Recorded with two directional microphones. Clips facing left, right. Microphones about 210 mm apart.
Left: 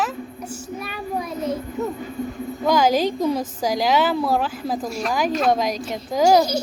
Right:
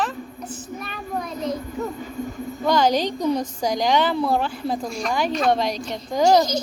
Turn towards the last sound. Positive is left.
turn(degrees=10)  # may be behind; listen again after turning